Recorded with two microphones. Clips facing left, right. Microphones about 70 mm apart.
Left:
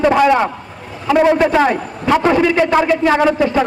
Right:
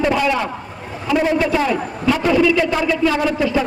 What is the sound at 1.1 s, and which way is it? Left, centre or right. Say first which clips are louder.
Speech: left 6 dB; left.